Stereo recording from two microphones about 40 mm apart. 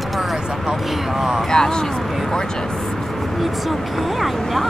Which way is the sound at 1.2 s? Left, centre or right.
Centre.